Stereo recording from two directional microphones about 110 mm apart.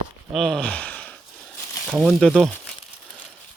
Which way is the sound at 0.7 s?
15° left (ahead or behind).